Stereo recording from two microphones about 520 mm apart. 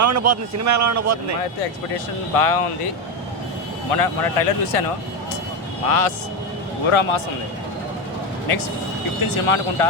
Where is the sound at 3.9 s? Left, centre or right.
Left.